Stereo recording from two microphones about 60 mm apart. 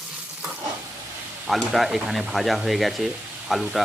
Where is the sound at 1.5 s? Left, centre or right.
Centre.